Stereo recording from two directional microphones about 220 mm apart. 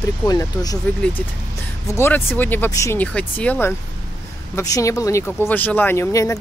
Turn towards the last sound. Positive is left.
turn(degrees=10)  # may be behind; listen again after turning